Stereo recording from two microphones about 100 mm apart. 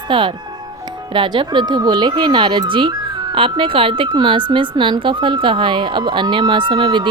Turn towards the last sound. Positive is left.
turn(degrees=-50)  # may be behind; listen again after turning